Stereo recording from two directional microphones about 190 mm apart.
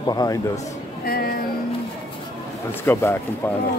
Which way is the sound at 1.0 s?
50° left (ahead or behind).